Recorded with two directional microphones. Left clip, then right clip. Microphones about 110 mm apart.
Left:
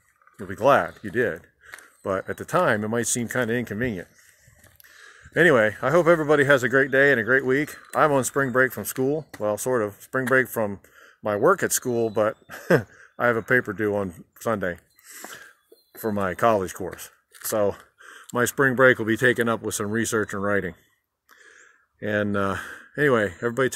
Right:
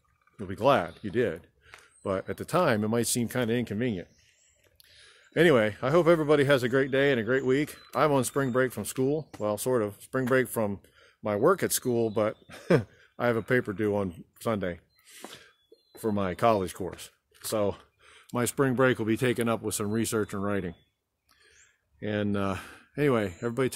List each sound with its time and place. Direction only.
0.4 s speech: 10° right (ahead or behind)
16.0 s speech: centre (ahead or behind)